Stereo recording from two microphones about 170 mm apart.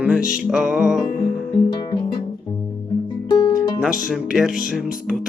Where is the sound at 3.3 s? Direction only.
25° left (ahead or behind).